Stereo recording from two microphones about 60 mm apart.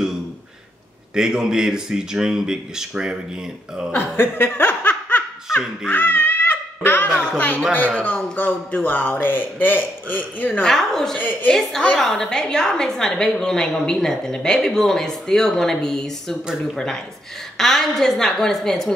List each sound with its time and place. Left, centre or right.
1.1 s speech: centre
3.9 s laughter: left
5.5 s a sound: centre
5.9 s babbling: left
7.3 s a man's voice: left
10.6 s a woman's voice: centre
11.1 s a woman's voice: left
11.5 s a woman's voice: centre